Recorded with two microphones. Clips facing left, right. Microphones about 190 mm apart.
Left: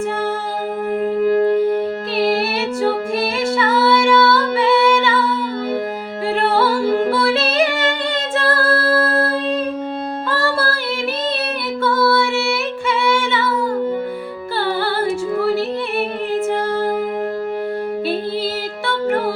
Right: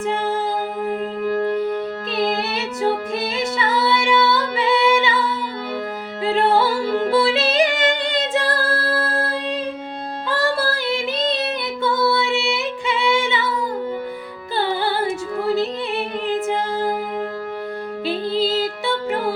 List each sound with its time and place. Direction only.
1.2 s music: 40° left (ahead or behind)
2.8 s music: 20° right (ahead or behind)
6.2 s music: 20° right (ahead or behind)
10.2 s female singing: 15° right (ahead or behind)
14.6 s music: 15° right (ahead or behind)
18.0 s music: 15° right (ahead or behind)